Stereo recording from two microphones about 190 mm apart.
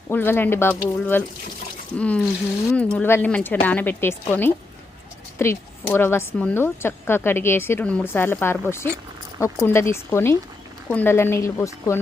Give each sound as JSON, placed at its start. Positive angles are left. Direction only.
{"t": 0.1, "sound": "speech", "side_deg": 10}